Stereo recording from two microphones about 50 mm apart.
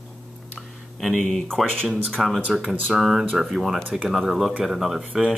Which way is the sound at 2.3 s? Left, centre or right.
Right.